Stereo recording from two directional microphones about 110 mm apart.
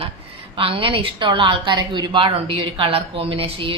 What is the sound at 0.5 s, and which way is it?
A woman's voice, 55° right (ahead or behind).